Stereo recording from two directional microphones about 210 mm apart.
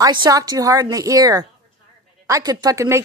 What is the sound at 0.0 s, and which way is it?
A woman's voice, 20° right (ahead or behind).